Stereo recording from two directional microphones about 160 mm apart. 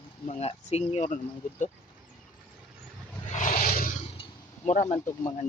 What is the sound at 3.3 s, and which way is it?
Roar, 55° left (ahead or behind).